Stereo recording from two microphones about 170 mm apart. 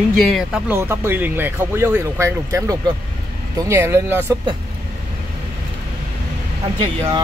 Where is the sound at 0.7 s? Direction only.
15° right (ahead or behind).